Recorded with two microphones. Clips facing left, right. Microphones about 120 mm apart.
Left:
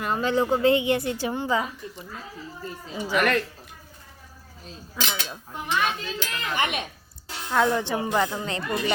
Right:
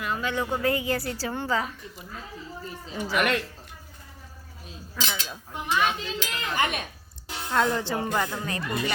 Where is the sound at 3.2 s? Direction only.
15° right (ahead or behind).